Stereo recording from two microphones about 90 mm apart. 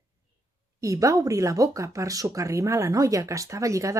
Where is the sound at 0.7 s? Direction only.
40° right (ahead or behind).